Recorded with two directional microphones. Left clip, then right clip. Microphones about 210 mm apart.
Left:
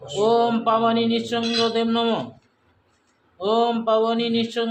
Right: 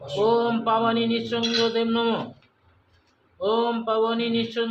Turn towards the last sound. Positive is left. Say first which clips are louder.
# left 2 dB
turn(degrees=35)  # may be behind; listen again after turning